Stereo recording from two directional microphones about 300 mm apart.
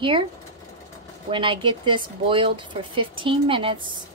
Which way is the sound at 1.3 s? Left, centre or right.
Centre.